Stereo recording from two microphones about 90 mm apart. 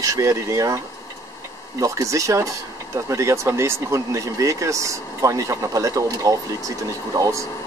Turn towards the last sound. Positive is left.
turn(degrees=-40)  # may be behind; listen again after turning